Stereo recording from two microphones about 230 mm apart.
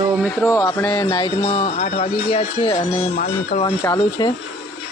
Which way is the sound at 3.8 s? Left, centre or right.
Centre.